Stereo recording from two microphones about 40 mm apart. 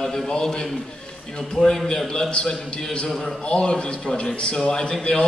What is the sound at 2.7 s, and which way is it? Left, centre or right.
Speech, left.